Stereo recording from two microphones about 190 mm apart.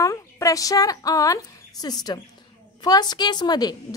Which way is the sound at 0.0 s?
15° left (ahead or behind).